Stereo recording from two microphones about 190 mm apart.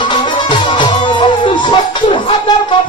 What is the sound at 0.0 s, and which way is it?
Music, 25° left (ahead or behind).